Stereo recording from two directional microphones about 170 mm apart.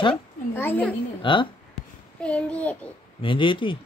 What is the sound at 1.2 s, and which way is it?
Speech, 30° left (ahead or behind).